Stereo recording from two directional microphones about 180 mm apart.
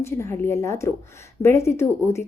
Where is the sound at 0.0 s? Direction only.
15° left (ahead or behind).